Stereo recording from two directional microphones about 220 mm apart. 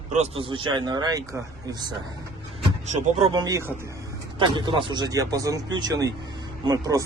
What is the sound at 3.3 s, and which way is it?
Speech, 15° right (ahead or behind).